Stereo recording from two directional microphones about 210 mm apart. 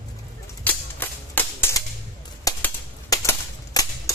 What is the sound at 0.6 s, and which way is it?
Cap gun, 10° left (ahead or behind).